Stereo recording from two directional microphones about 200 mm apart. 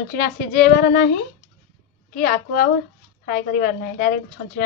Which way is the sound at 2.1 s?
45° left (ahead or behind).